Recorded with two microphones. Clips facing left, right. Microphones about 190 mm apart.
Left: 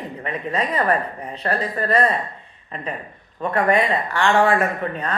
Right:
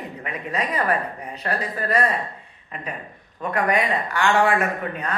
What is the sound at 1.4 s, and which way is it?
Speech, 5° right (ahead or behind).